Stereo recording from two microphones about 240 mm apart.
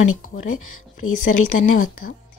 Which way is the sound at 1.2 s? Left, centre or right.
Left.